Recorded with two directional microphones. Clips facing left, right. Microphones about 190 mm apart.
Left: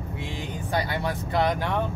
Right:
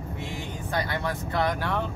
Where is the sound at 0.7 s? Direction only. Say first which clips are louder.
Left 2 dB; 15° left (ahead or behind).